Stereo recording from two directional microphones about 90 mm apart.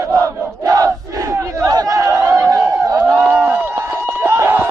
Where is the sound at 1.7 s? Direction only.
45° right (ahead or behind).